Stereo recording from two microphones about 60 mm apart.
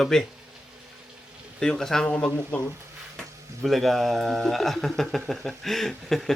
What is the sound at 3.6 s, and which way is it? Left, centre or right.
A man's voice, centre.